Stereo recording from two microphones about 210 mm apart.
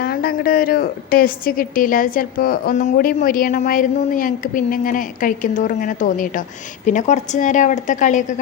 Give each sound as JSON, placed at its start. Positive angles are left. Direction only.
{"t": 0.0, "sound": "a woman's voice", "side_deg": 45}